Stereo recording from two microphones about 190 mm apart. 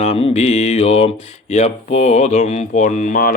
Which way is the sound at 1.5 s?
35° left (ahead or behind).